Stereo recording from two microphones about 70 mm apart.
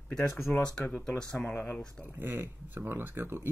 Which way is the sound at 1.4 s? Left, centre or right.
Left.